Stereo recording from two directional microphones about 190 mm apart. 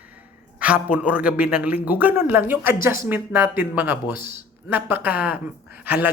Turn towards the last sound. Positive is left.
turn(degrees=-10)  # may be behind; listen again after turning